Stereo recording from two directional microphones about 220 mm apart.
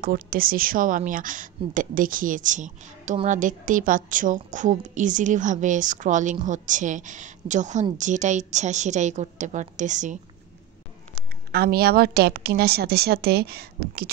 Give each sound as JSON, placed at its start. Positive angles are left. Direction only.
{"t": 0.0, "sound": "a woman's voice", "side_deg": -40}
{"t": 11.5, "sound": "a woman's voice", "side_deg": -45}